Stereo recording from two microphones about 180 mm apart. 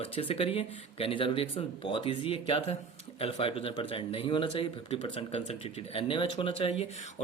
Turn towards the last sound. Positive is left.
turn(degrees=30)  # may be behind; listen again after turning